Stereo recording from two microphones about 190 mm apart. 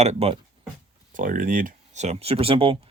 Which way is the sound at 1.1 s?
45° right (ahead or behind).